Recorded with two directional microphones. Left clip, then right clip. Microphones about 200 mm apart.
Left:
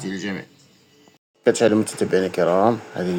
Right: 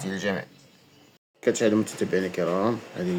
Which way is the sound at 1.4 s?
15° left (ahead or behind).